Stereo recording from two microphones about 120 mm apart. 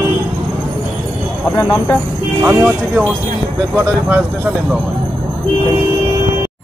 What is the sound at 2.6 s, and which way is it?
Speech, 10° right (ahead or behind).